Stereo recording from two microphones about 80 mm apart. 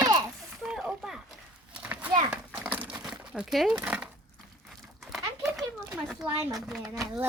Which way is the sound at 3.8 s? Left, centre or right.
Centre.